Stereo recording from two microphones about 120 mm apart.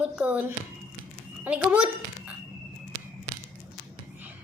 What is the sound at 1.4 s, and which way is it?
Speech, 10° right (ahead or behind).